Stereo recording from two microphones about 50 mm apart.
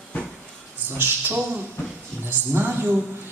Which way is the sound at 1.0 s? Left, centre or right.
Right.